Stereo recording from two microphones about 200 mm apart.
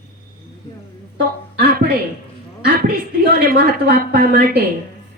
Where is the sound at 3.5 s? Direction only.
50° right (ahead or behind).